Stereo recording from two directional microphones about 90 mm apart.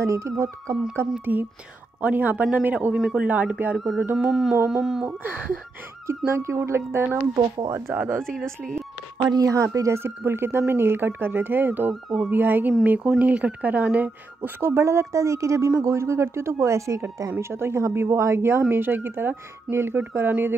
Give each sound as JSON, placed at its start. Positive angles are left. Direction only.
{"t": 0.0, "sound": "speech", "side_deg": -35}
{"t": 1.2, "sound": "a man's voice", "side_deg": -20}
{"t": 3.7, "sound": "mantra", "side_deg": 0}
{"t": 5.0, "sound": "a man's voice", "side_deg": -20}
{"t": 6.0, "sound": "speech", "side_deg": -30}
{"t": 7.3, "sound": "speech", "side_deg": -50}
{"t": 7.9, "sound": "a man's voice", "side_deg": -15}
{"t": 9.2, "sound": "speech", "side_deg": -40}
{"t": 11.9, "sound": "a man's voice", "side_deg": -5}
{"t": 12.3, "sound": "a man's voice", "side_deg": -20}
{"t": 14.7, "sound": "speech", "side_deg": -30}